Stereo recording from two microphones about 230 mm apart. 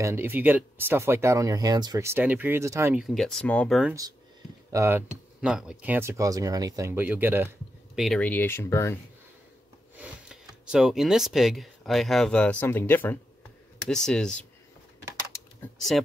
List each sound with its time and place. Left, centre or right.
0.0 s speech: centre
4.7 s speech: centre
9.9 s speech: centre